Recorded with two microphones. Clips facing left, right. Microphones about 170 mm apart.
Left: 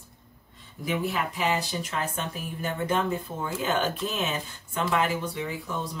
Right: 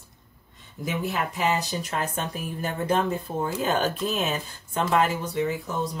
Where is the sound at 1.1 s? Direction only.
40° right (ahead or behind).